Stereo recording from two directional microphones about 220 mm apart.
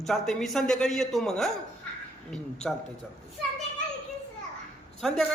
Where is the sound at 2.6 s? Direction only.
Centre (ahead or behind).